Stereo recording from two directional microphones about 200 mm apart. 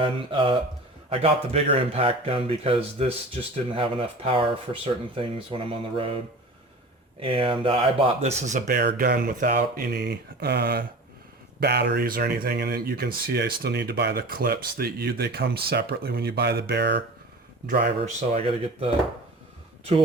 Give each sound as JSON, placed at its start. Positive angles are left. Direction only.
{"t": 0.0, "sound": "speech", "side_deg": -25}
{"t": 7.2, "sound": "speech", "side_deg": -25}
{"t": 8.6, "sound": "speech", "side_deg": -55}
{"t": 18.0, "sound": "speech", "side_deg": -30}